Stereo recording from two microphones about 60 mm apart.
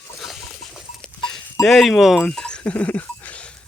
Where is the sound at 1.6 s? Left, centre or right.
Centre.